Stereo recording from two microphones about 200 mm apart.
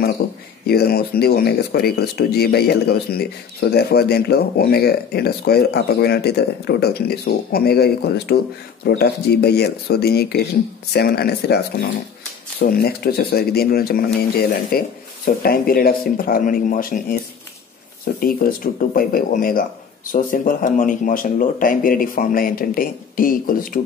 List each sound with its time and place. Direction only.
0.2 s a sound: 55° left (ahead or behind)
0.7 s speech: 50° left (ahead or behind)
18.2 s speech: 45° left (ahead or behind)